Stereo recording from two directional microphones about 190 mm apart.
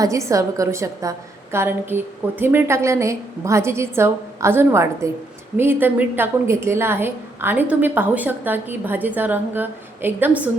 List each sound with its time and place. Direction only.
0.0 s a woman's voice: 15° right (ahead or behind)